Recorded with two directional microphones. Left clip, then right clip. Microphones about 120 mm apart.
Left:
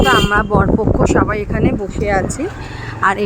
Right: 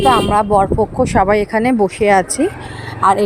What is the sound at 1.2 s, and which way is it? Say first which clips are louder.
Speech: right 5 dB; 25° right (ahead or behind).